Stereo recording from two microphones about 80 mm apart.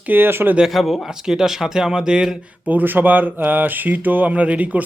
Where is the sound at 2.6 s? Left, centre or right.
Right.